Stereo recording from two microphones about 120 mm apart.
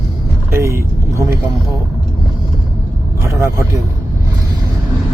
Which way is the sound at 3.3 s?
25° right (ahead or behind).